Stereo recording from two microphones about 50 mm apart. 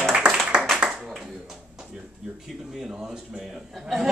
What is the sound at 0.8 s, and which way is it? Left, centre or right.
Clapping, centre.